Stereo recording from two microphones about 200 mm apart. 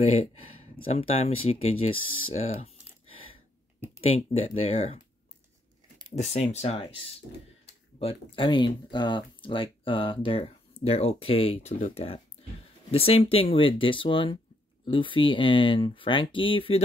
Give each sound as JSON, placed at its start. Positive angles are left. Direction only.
{"t": 0.0, "sound": "speech", "side_deg": 30}
{"t": 4.3, "sound": "speech", "side_deg": 30}
{"t": 6.1, "sound": "speech", "side_deg": 35}
{"t": 8.0, "sound": "speech", "side_deg": 25}